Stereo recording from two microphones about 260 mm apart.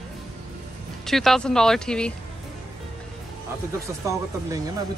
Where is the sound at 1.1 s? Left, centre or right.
Centre.